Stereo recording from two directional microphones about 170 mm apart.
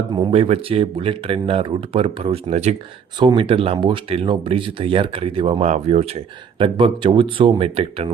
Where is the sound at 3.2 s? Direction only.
30° right (ahead or behind).